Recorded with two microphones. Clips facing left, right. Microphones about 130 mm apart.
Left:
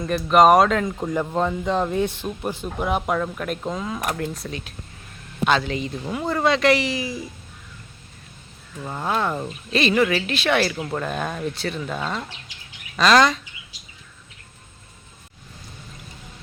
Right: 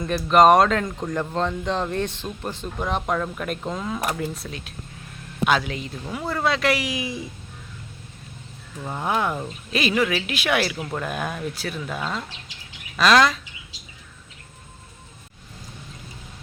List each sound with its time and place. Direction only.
0.0 s speech: centre (ahead or behind)
7.0 s speech: 25° right (ahead or behind)
8.8 s speech: 10° right (ahead or behind)